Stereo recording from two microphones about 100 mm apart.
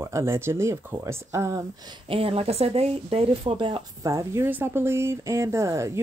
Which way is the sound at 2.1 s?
75° right (ahead or behind).